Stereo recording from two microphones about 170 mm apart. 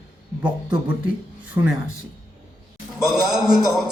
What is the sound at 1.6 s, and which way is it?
Speech, 25° right (ahead or behind).